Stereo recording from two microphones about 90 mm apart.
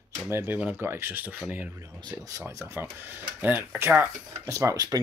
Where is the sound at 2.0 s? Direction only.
45° right (ahead or behind).